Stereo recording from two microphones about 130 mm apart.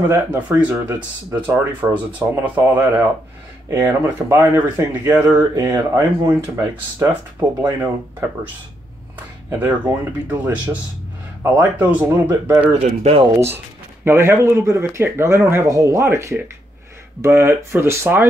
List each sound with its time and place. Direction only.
0.1 s speech: 15° right (ahead or behind)
9.5 s speech: 15° right (ahead or behind)
13.0 s speech: 50° right (ahead or behind)
14.0 s speech: 20° right (ahead or behind)